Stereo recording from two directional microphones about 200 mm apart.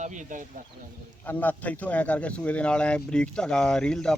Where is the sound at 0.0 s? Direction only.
40° right (ahead or behind).